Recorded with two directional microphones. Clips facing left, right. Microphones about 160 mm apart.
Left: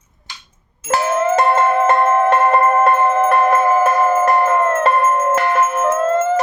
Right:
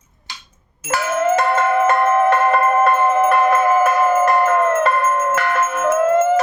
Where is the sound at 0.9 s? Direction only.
30° left (ahead or behind).